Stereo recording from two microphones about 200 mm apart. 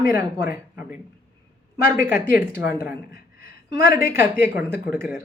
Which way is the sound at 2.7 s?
50° left (ahead or behind).